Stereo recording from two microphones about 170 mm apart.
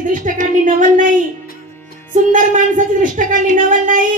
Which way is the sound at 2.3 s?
50° right (ahead or behind).